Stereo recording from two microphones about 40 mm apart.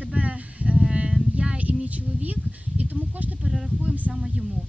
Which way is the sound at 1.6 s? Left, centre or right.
Right.